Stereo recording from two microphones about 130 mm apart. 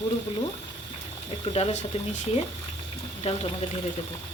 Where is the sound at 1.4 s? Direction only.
50° left (ahead or behind).